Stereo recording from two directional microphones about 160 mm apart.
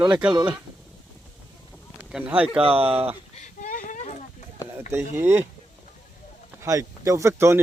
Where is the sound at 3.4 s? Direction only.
55° left (ahead or behind).